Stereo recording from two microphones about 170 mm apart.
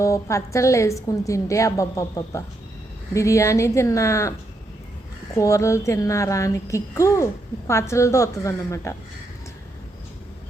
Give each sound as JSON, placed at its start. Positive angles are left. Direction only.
{"t": 0.0, "sound": "a woman's voice", "side_deg": 15}
{"t": 5.4, "sound": "a woman's voice", "side_deg": 15}